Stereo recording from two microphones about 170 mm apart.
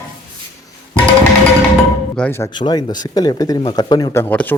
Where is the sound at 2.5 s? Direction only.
25° left (ahead or behind).